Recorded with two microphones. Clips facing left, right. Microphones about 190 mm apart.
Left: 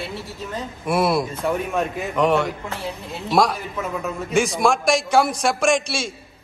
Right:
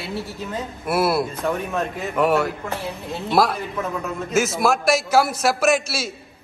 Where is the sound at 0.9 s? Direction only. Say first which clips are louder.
Even; 5° right (ahead or behind).